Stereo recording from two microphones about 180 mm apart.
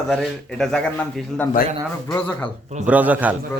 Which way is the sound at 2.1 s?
5° left (ahead or behind).